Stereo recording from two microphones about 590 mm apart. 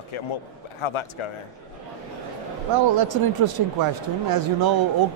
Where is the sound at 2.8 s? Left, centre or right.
Right.